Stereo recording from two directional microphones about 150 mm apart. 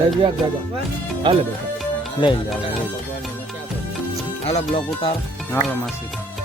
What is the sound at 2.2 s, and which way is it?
Speech, 30° left (ahead or behind).